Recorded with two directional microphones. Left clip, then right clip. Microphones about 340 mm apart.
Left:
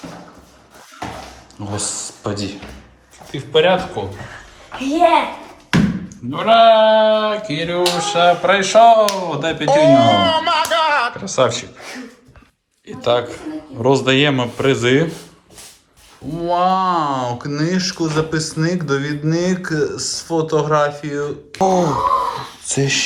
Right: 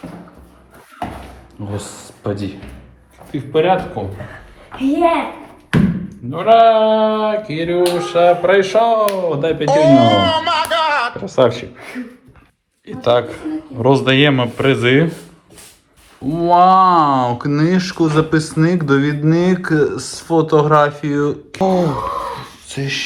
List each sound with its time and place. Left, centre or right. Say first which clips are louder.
1.7 s a man's voice: left 5 dB; centre
6.3 s speech: right 1 dB; centre
12.9 s a man's voice: right 3 dB; centre
16.3 s speech: right 6 dB; centre
22.6 s speech: left 4 dB; centre